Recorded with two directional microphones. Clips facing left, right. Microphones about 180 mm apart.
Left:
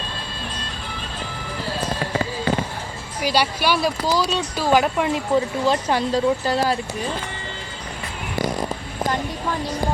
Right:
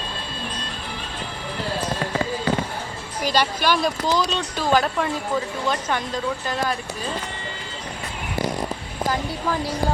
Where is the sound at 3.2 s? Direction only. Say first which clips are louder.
Left 1 dB; 10° left (ahead or behind).